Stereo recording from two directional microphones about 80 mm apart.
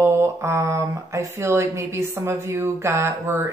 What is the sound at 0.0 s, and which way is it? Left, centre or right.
Speech, right.